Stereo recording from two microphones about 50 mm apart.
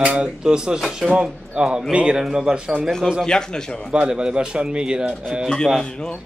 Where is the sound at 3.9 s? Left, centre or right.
Centre.